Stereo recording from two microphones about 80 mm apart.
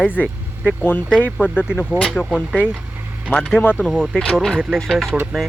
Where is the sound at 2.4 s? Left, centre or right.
Centre.